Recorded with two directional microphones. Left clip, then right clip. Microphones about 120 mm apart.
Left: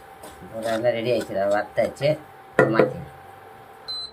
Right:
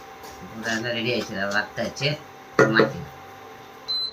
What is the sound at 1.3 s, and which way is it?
Speech, 90° left.